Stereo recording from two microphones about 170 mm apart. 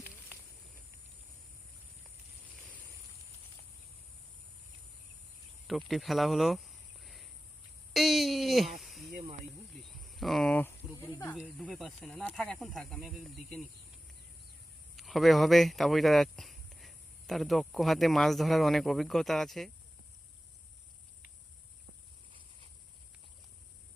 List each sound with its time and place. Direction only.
5.6 s a sound: centre (ahead or behind)
9.9 s cricket: centre (ahead or behind)
10.9 s snake: 20° left (ahead or behind)
11.6 s speech: centre (ahead or behind)
14.9 s speech: centre (ahead or behind)